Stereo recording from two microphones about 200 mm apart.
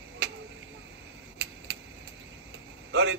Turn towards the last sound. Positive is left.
turn(degrees=-60)  # may be behind; listen again after turning